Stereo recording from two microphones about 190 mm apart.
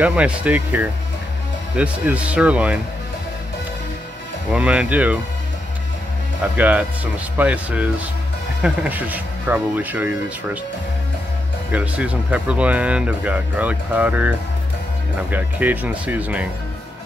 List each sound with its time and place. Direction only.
0.0 s speech: 5° right (ahead or behind)
4.5 s speech: 5° right (ahead or behind)
6.4 s speech: 10° right (ahead or behind)
11.7 s speech: 5° right (ahead or behind)
15.3 s speech: 10° right (ahead or behind)